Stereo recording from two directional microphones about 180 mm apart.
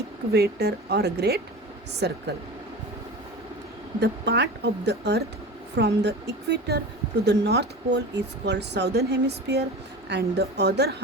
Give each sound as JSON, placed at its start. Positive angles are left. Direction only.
{"t": 0.3, "sound": "speech", "side_deg": -65}
{"t": 4.0, "sound": "speech", "side_deg": -70}